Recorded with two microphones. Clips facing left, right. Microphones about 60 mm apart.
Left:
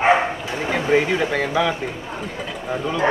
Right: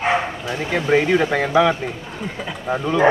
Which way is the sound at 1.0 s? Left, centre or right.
Centre.